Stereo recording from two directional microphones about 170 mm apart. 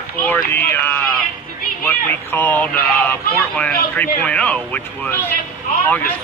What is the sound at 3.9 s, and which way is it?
A man's voice, 10° left (ahead or behind).